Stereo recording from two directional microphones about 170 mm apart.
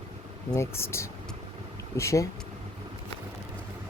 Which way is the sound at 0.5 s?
15° left (ahead or behind).